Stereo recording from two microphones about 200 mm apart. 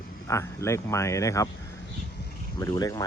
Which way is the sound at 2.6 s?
20° left (ahead or behind).